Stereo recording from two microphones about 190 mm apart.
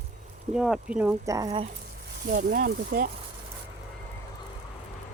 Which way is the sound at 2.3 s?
45° right (ahead or behind).